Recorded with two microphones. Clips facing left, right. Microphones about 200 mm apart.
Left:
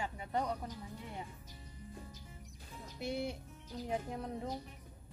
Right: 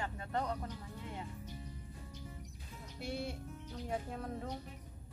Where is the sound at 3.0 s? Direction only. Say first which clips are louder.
Left 2 dB; 15° left (ahead or behind).